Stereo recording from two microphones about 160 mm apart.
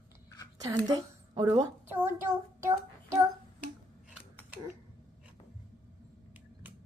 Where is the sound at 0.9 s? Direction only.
25° right (ahead or behind).